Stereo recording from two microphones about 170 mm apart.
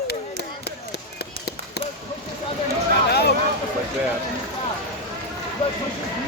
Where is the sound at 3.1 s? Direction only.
70° left (ahead or behind).